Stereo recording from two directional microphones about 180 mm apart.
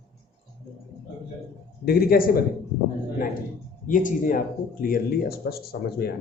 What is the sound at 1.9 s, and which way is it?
Speech, 60° left (ahead or behind).